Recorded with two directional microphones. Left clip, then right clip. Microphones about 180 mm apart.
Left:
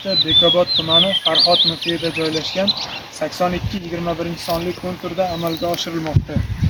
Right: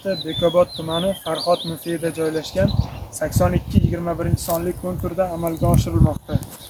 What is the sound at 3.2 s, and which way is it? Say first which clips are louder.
Speech: even; 5° right (ahead or behind).